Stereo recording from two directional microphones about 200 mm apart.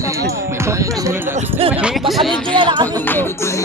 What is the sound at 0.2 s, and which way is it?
Music, 15° right (ahead or behind).